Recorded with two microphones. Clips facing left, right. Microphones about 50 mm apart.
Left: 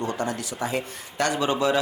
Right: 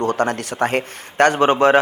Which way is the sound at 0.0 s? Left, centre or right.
Right.